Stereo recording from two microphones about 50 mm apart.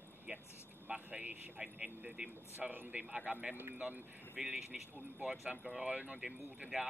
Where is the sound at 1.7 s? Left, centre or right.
Right.